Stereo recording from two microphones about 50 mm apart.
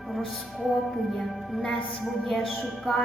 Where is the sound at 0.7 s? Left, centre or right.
Centre.